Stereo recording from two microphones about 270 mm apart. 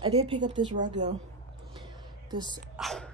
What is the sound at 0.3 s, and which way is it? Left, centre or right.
Speech, centre.